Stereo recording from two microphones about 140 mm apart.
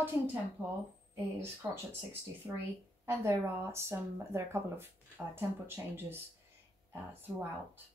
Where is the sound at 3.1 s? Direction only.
20° right (ahead or behind).